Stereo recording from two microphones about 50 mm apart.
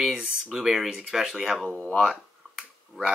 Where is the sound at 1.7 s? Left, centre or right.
Centre.